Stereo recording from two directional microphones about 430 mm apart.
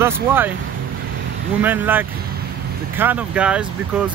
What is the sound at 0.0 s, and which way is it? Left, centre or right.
Speech, centre.